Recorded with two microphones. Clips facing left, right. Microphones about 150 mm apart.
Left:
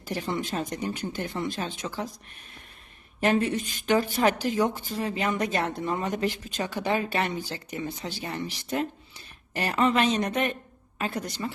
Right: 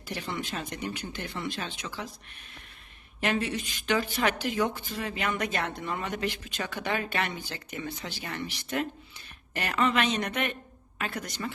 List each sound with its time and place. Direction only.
0.0 s a woman's voice: 40° left (ahead or behind)
3.2 s a woman's voice: 40° left (ahead or behind)